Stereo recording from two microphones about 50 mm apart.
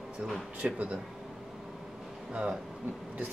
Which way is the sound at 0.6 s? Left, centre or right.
Right.